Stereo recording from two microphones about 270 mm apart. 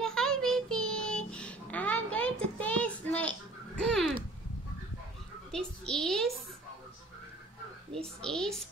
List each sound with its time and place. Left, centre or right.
0.0 s child singing: centre
5.5 s a child's voice: centre
8.0 s a woman's voice: centre